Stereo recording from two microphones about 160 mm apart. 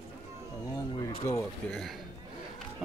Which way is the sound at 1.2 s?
15° left (ahead or behind).